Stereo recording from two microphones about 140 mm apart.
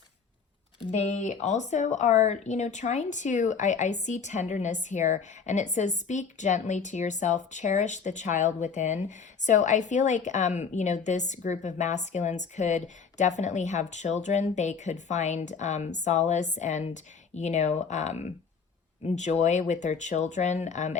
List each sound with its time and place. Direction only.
0.9 s speech: 60° left (ahead or behind)